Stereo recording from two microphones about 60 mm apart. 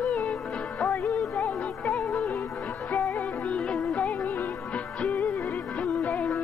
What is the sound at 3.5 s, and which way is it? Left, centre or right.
Music, centre.